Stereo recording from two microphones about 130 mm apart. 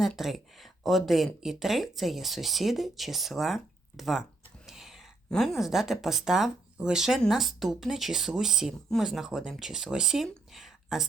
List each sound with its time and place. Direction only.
0.0 s speech: centre (ahead or behind)